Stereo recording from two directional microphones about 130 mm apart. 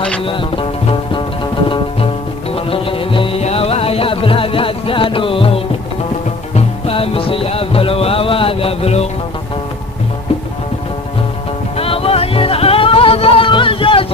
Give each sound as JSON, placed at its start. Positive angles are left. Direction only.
{"t": 0.2, "sound": "music", "side_deg": 40}
{"t": 2.5, "sound": "music", "side_deg": 45}
{"t": 11.7, "sound": "music", "side_deg": 45}